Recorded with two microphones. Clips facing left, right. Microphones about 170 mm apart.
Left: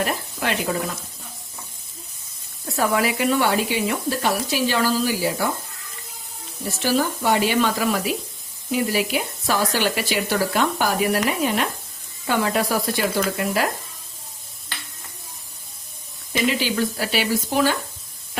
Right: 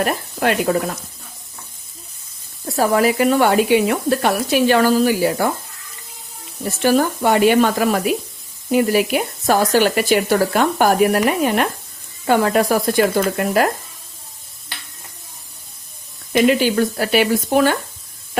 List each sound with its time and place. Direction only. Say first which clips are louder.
0.0 s speech: right 6 dB; 55° right (ahead or behind)
2.7 s speech: right 6 dB; 40° right (ahead or behind); by 5.5 s 55° right (ahead or behind)
6.8 s speech: right 5 dB; 50° right (ahead or behind)
16.3 s speech: right 8 dB; 50° right (ahead or behind)